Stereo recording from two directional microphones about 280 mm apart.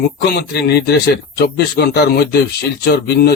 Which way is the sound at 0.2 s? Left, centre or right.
Left.